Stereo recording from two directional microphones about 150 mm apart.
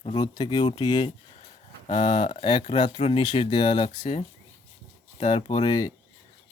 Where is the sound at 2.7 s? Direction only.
45° left (ahead or behind).